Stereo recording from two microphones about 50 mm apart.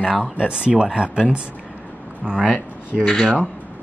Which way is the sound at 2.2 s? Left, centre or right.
Centre.